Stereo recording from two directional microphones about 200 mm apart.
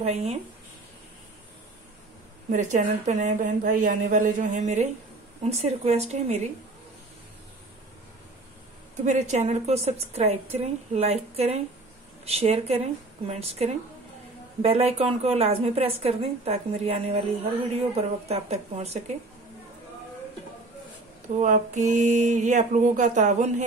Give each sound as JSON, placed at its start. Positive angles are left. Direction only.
{"t": 0.0, "sound": "a woman's voice", "side_deg": -30}
{"t": 2.5, "sound": "a woman's voice", "side_deg": -40}
{"t": 9.0, "sound": "a woman's voice", "side_deg": -35}
{"t": 21.4, "sound": "a woman's voice", "side_deg": -35}